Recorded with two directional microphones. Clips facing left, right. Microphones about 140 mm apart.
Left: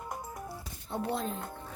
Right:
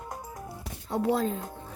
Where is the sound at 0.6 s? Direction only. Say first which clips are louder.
Right 8 dB; 90° right.